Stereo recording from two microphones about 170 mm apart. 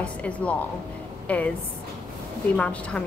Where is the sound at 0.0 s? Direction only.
5° left (ahead or behind).